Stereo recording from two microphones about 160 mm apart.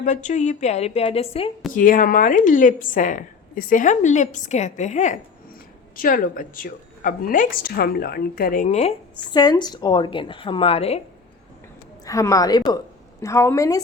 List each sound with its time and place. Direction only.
0.0 s a woman's voice: 50° left (ahead or behind)
1.7 s a woman's voice: 55° left (ahead or behind)
6.0 s speech: 60° left (ahead or behind); by 9.0 s 40° left (ahead or behind)
9.3 s a woman's voice: 25° left (ahead or behind)
12.0 s a woman's voice: 20° left (ahead or behind)